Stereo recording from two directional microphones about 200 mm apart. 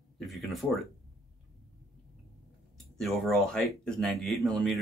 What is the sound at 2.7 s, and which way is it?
Speech, centre (ahead or behind).